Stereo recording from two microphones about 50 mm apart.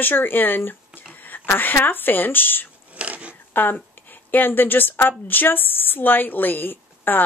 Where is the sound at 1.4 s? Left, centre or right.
Left.